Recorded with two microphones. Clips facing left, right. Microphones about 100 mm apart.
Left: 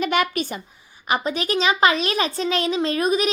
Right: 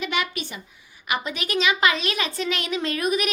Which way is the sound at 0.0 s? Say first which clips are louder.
Left 6 dB; 45° left (ahead or behind).